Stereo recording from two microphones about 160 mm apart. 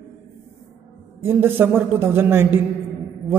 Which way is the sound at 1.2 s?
15° right (ahead or behind).